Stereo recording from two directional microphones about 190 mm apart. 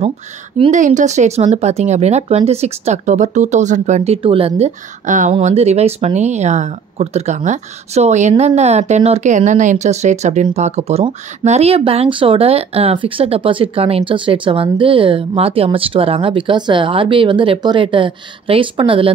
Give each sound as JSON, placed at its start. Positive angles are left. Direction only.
{"t": 0.7, "sound": "speech", "side_deg": -40}